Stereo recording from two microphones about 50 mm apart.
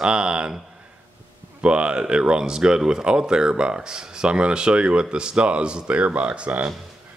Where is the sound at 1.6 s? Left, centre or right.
Right.